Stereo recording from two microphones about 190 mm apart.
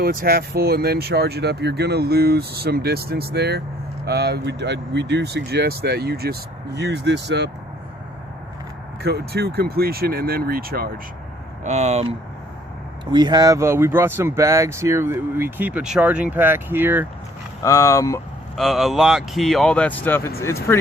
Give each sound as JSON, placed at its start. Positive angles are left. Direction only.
{"t": 0.0, "sound": "speech", "side_deg": -50}
{"t": 9.0, "sound": "speech", "side_deg": -55}
{"t": 11.6, "sound": "speech", "side_deg": -35}
{"t": 13.1, "sound": "speech", "side_deg": -20}
{"t": 17.6, "sound": "speech", "side_deg": 15}
{"t": 18.5, "sound": "speech", "side_deg": 0}